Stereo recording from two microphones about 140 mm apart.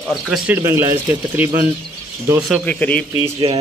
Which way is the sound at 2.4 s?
5° right (ahead or behind).